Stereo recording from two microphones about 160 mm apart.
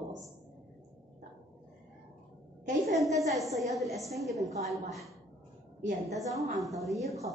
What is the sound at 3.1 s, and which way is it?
A woman's voice, centre (ahead or behind).